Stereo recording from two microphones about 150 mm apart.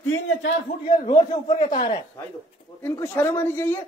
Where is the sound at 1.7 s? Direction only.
30° left (ahead or behind).